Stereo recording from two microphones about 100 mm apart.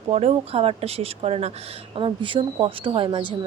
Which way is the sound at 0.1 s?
90° right.